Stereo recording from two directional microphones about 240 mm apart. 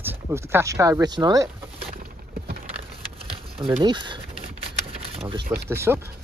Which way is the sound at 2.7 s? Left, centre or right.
Right.